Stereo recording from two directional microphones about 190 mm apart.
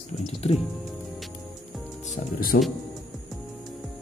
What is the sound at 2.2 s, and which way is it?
Speech, 40° left (ahead or behind).